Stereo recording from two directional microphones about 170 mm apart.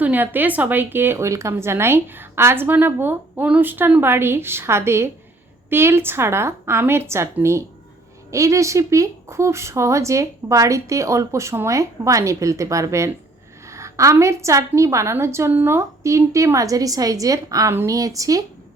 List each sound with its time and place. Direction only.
0.0 s speech: 10° right (ahead or behind)